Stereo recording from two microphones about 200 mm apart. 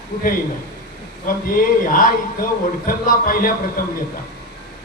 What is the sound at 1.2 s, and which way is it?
A man's voice, 45° left (ahead or behind).